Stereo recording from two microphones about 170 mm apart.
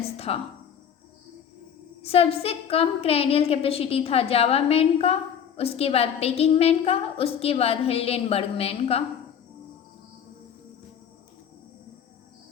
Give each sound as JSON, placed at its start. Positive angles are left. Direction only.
{"t": 0.0, "sound": "speech", "side_deg": 35}
{"t": 2.0, "sound": "a woman's voice", "side_deg": 35}